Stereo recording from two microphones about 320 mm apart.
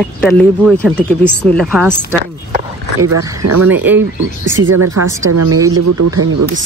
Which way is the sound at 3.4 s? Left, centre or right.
Right.